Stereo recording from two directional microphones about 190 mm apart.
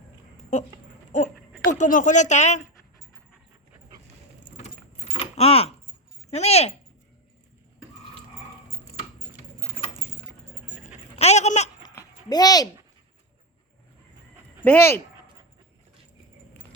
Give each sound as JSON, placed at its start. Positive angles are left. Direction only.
{"t": 1.1, "sound": "speech", "side_deg": 40}
{"t": 5.1, "sound": "keys jangling", "side_deg": 30}
{"t": 6.3, "sound": "speech", "side_deg": 35}
{"t": 10.8, "sound": "a sound", "side_deg": 35}
{"t": 11.8, "sound": "a sound", "side_deg": 20}
{"t": 14.6, "sound": "speech", "side_deg": 10}